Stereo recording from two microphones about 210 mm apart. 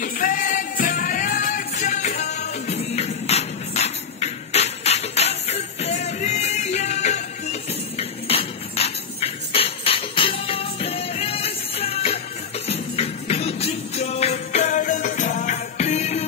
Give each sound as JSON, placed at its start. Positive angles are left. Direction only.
{"t": 0.0, "sound": "music", "side_deg": 40}
{"t": 8.0, "sound": "a sound", "side_deg": 30}
{"t": 12.6, "sound": "music", "side_deg": 30}